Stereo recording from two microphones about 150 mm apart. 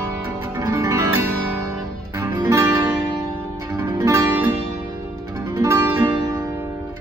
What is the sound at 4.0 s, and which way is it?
Music, 20° right (ahead or behind).